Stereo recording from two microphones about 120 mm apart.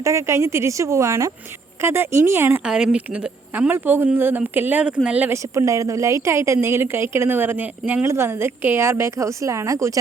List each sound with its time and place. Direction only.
0.0 s a woman's voice: 25° right (ahead or behind)
2.6 s speech: 5° right (ahead or behind)
5.4 s a woman's voice: 25° right (ahead or behind)